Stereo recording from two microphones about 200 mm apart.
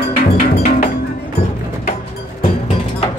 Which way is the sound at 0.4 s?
45° left (ahead or behind).